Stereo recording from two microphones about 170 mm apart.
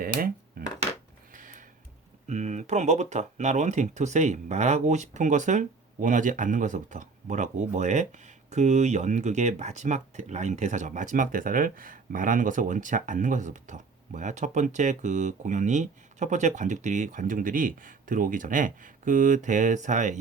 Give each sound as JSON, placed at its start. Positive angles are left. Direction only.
{"t": 0.6, "sound": "dishes", "side_deg": -60}
{"t": 1.3, "sound": "a sound", "side_deg": -50}
{"t": 2.2, "sound": "speech", "side_deg": -45}